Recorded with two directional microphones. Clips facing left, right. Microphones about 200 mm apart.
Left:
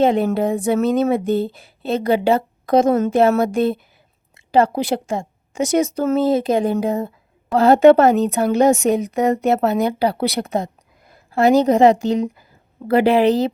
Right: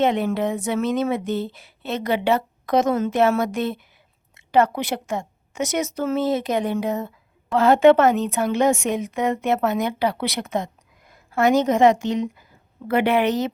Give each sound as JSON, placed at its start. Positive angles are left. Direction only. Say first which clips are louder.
{"t": 0.0, "sound": "speech", "louder": "left 4 dB", "side_deg": 30}